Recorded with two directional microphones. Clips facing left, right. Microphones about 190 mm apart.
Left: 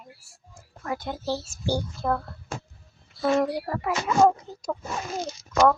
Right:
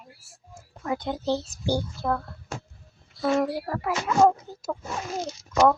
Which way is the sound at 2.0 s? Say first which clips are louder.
Left 1 dB; centre (ahead or behind).